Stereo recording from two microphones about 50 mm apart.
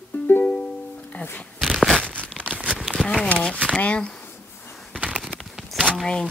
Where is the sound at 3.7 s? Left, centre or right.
Left.